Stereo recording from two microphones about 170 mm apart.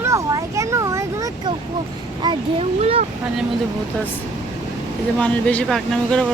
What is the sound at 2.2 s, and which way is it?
Speech, 30° right (ahead or behind).